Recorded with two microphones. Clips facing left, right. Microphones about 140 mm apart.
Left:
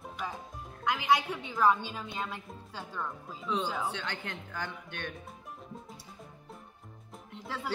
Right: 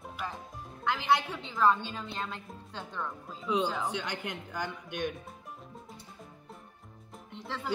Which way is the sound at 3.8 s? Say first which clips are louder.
Right 2 dB; 15° right (ahead or behind).